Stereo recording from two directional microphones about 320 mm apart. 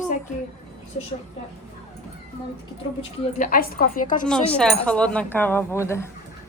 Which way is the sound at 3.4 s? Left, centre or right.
Left.